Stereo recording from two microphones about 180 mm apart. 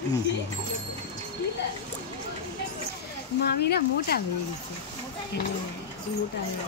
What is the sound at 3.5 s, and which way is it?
Speech, 60° left (ahead or behind).